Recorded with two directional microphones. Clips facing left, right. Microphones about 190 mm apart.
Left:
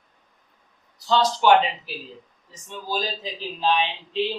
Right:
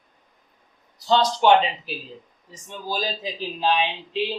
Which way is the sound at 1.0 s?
20° right (ahead or behind).